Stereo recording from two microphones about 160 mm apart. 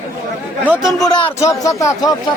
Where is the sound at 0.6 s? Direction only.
10° right (ahead or behind).